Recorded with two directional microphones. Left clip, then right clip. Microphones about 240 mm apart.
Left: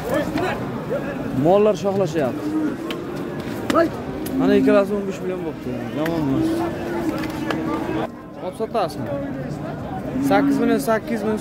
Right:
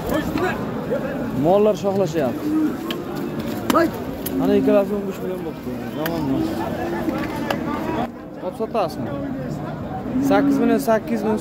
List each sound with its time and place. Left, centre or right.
1.5 s speech: centre
3.7 s speech: right
4.4 s speech: centre
8.5 s speech: centre
10.2 s speech: centre